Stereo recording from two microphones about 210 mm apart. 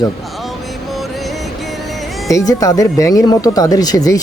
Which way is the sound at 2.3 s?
15° left (ahead or behind).